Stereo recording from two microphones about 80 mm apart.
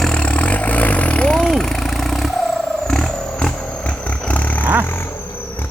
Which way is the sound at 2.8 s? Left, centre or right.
Centre.